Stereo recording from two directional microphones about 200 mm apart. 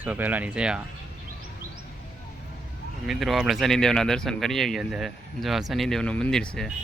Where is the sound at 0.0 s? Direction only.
10° right (ahead or behind).